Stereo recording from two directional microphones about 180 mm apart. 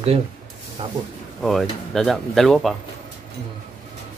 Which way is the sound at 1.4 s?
Centre (ahead or behind).